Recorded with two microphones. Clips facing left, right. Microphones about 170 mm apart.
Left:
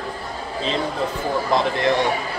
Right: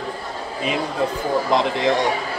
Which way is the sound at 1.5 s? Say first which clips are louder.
Left 1 dB; 15° right (ahead or behind).